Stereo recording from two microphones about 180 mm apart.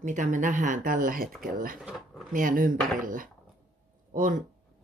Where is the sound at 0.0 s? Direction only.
45° right (ahead or behind).